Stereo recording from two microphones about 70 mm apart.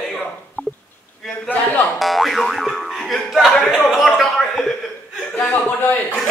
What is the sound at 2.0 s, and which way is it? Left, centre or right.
Boing, centre.